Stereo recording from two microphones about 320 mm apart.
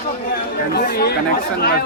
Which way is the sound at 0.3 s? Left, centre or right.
Left.